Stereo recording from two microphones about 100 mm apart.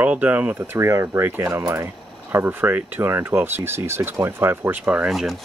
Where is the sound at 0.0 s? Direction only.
15° right (ahead or behind).